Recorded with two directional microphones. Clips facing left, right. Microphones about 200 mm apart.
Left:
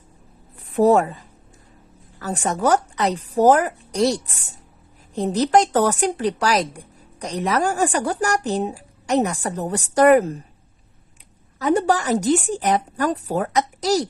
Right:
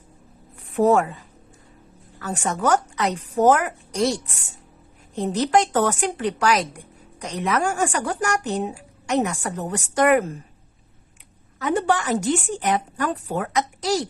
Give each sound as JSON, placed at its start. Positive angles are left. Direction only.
{"t": 0.8, "sound": "speech", "side_deg": 35}
{"t": 2.1, "sound": "speech", "side_deg": 35}
{"t": 11.6, "sound": "speech", "side_deg": 40}